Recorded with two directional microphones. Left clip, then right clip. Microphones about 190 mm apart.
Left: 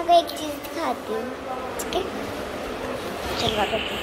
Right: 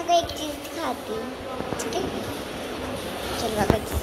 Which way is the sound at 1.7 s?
35° left (ahead or behind).